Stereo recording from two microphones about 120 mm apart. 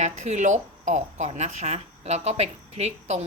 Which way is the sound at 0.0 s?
75° right (ahead or behind).